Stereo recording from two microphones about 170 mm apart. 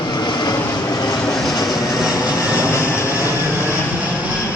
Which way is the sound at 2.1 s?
20° left (ahead or behind).